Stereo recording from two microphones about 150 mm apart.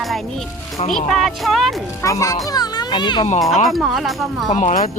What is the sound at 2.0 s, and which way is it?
A child's voice, 20° left (ahead or behind).